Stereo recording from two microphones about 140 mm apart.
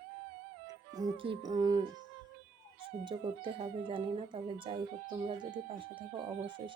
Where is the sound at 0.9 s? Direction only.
35° right (ahead or behind).